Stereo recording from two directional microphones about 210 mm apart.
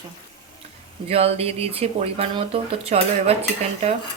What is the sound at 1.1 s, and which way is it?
Speech, 30° right (ahead or behind).